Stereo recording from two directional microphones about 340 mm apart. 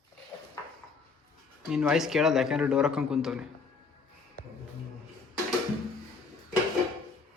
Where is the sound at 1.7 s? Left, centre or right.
Centre.